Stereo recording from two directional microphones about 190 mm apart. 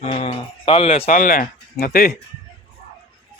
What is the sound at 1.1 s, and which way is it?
Speech, 45° left (ahead or behind).